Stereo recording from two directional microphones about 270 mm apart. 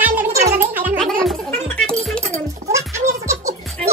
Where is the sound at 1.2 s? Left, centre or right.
Centre.